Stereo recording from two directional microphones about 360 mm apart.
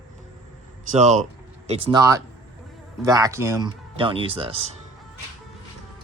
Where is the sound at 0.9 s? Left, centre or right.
Centre.